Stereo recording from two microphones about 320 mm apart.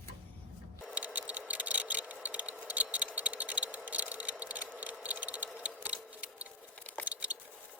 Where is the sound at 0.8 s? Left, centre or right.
Centre.